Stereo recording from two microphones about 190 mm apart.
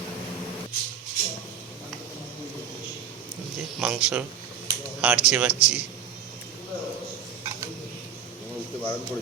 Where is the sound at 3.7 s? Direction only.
10° right (ahead or behind).